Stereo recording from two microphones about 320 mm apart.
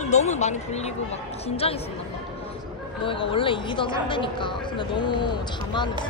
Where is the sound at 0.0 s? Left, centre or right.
Left.